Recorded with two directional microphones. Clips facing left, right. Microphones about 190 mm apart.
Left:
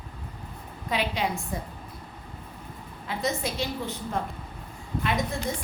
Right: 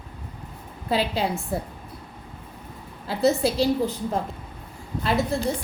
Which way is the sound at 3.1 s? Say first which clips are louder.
Right 8 dB; 35° right (ahead or behind).